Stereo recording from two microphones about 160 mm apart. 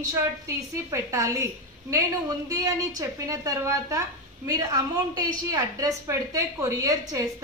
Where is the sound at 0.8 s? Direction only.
20° right (ahead or behind).